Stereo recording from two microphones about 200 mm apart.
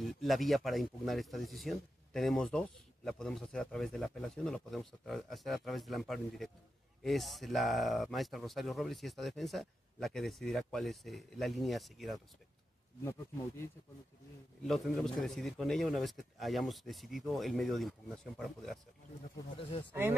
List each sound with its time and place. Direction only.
0.0 s speech: centre (ahead or behind)
14.6 s speech: centre (ahead or behind)
19.3 s speech: 25° left (ahead or behind)
19.9 s speech: 10° right (ahead or behind)